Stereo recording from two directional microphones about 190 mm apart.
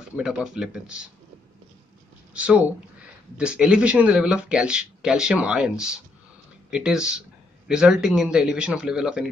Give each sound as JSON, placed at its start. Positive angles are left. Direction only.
{"t": 0.1, "sound": "speech", "side_deg": -5}
{"t": 2.3, "sound": "speech", "side_deg": -5}